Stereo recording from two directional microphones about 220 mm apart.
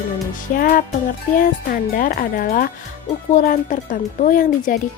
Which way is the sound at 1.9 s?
40° left (ahead or behind).